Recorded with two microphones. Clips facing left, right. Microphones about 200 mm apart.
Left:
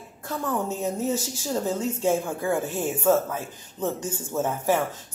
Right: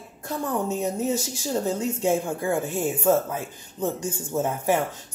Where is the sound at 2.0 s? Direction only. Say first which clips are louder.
Even; 15° right (ahead or behind).